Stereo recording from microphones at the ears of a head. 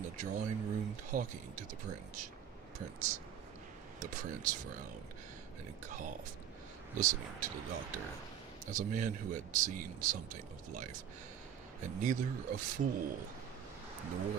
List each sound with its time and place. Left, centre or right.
0.0 s speech: right
5.9 s speech: right